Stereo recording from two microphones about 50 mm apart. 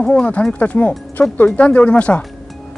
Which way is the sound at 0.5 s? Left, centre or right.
Left.